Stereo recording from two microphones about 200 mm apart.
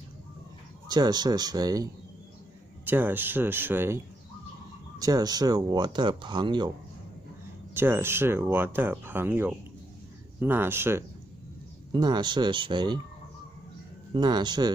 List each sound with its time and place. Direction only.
0.8 s speech: 20° right (ahead or behind)
7.7 s speech: 10° right (ahead or behind)
14.1 s speech: 20° right (ahead or behind)